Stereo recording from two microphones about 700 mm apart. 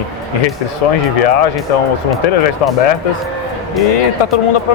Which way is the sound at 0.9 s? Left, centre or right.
Left.